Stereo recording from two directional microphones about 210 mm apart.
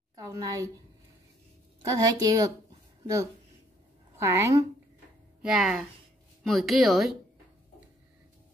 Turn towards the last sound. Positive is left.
turn(degrees=0)  # may be behind; listen again after turning